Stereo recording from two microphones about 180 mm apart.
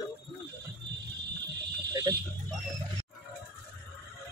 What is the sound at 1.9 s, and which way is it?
Speech, 20° right (ahead or behind).